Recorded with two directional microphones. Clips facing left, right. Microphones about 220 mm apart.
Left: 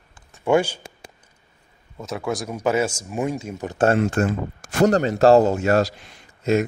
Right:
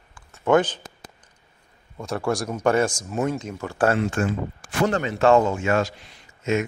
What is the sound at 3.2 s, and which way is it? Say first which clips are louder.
Speech: even; 15° left (ahead or behind).